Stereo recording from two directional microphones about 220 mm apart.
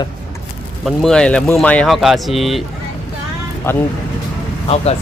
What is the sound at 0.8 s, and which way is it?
Speech, centre (ahead or behind).